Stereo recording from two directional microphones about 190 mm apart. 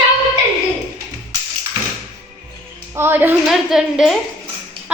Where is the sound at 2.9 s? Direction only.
10° right (ahead or behind).